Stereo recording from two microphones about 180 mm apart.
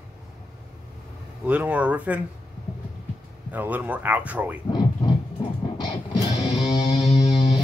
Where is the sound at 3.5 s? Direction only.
10° right (ahead or behind).